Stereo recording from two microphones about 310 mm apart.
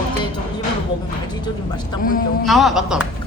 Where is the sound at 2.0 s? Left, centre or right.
Left.